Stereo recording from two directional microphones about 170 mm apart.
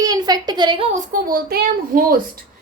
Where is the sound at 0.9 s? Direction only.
55° right (ahead or behind).